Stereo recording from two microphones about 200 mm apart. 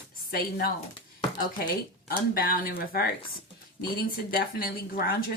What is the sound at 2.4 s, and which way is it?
Speech, 45° left (ahead or behind).